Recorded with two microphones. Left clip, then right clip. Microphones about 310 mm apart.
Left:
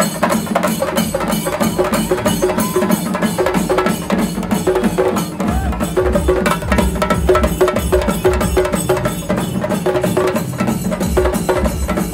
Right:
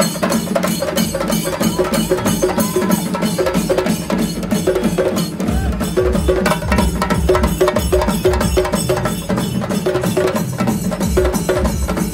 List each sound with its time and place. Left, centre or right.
6.4 s music: centre
8.2 s music: left